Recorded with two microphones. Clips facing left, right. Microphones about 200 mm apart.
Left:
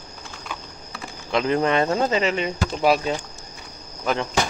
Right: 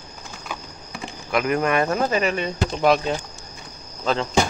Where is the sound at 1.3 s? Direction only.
25° left (ahead or behind).